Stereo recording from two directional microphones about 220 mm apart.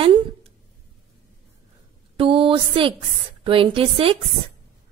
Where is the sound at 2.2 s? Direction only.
25° right (ahead or behind).